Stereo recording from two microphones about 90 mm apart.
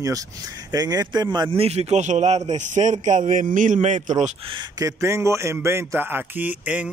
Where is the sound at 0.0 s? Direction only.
40° right (ahead or behind).